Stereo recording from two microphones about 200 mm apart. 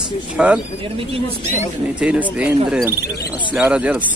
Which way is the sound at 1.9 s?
5° right (ahead or behind).